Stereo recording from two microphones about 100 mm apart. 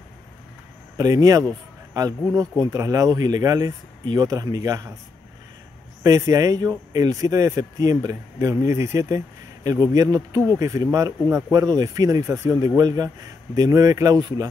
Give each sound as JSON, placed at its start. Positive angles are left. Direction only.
{"t": 0.9, "sound": "speech", "side_deg": -35}
{"t": 6.0, "sound": "speech", "side_deg": -30}